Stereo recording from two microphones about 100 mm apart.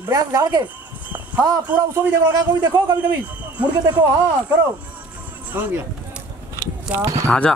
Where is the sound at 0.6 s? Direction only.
15° right (ahead or behind).